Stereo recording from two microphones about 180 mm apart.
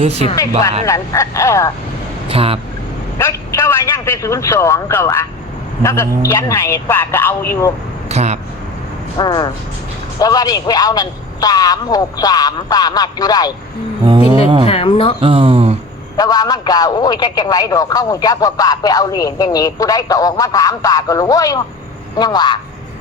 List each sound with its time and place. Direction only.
0.9 s a man's voice: 15° left (ahead or behind)
2.3 s speech: 30° right (ahead or behind)
3.2 s a man's voice: 15° left (ahead or behind)
8.1 s speech: 40° right (ahead or behind)
9.1 s a man's voice: 25° left (ahead or behind)
14.1 s music: 25° right (ahead or behind)
14.6 s speech: 30° left (ahead or behind)
15.2 s speech: 30° right (ahead or behind)
16.1 s a man's voice: 20° left (ahead or behind)